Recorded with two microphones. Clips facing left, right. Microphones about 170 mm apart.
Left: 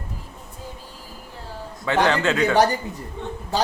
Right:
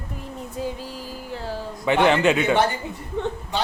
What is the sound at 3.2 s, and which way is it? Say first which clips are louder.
Speech: right 7 dB; 90° right.